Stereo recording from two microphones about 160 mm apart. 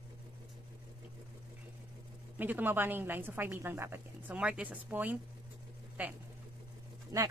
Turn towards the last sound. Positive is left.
turn(degrees=-20)  # may be behind; listen again after turning